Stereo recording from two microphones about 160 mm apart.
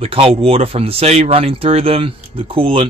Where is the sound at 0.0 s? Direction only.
35° right (ahead or behind).